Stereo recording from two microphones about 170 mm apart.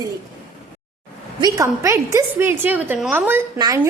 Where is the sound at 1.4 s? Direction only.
20° right (ahead or behind).